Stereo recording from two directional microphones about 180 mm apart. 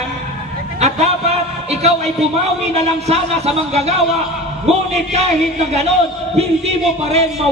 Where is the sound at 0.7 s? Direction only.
40° right (ahead or behind).